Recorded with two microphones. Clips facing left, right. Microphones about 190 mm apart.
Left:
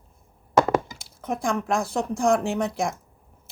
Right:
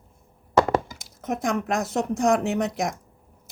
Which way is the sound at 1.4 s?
20° right (ahead or behind).